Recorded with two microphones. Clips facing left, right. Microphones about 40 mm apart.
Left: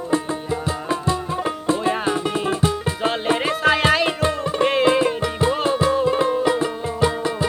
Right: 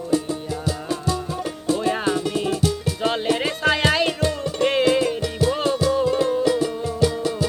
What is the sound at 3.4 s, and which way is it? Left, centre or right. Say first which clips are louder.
Music: left 2 dB; centre.